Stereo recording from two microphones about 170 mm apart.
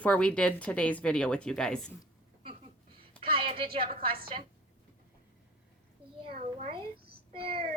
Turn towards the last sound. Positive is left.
turn(degrees=-35)  # may be behind; listen again after turning